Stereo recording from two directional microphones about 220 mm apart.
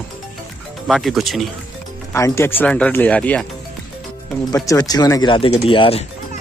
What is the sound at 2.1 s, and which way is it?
Speech, 10° left (ahead or behind).